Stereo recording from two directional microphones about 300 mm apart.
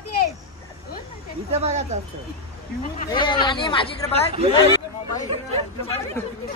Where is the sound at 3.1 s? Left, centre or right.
Centre.